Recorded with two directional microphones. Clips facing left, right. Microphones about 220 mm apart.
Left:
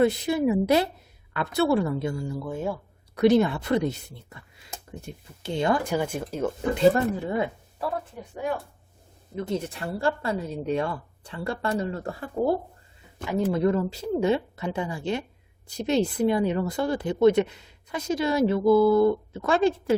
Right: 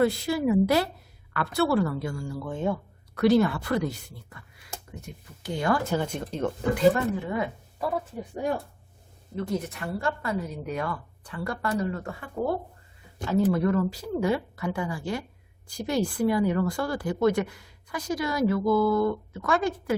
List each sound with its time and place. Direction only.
0.0 s speech: 20° left (ahead or behind)
2.4 s speech: 5° left (ahead or behind)
3.2 s speech: 20° left (ahead or behind)
6.7 s speech: 30° left (ahead or behind)
9.3 s speech: 20° left (ahead or behind)
13.2 s speech: 20° left (ahead or behind)